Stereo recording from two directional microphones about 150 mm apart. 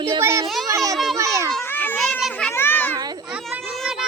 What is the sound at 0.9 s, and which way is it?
Speech, centre (ahead or behind).